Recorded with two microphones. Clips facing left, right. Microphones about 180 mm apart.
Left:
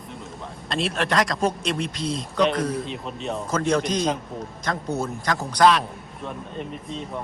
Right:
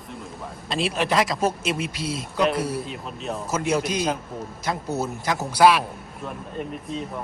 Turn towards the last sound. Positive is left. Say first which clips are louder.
# right 2 dB
turn(degrees=-5)  # may be behind; listen again after turning